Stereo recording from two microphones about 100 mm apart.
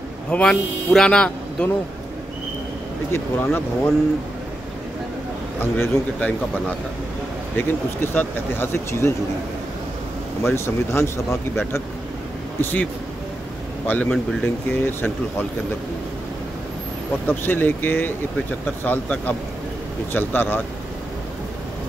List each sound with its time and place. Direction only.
0.3 s speech: 10° left (ahead or behind)
3.1 s speech: 25° left (ahead or behind)
5.6 s speech: 20° left (ahead or behind)
7.5 s speech: 20° left (ahead or behind)
10.4 s speech: 25° left (ahead or behind)
13.8 s speech: 15° left (ahead or behind)
17.3 s speech: 20° left (ahead or behind)